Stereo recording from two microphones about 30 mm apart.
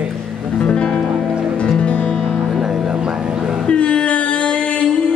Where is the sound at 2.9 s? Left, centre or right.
Right.